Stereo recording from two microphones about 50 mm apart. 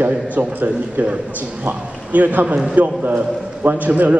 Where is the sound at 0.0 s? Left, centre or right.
Right.